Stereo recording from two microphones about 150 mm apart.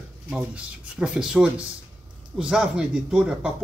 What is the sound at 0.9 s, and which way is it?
A man's voice, 5° right (ahead or behind).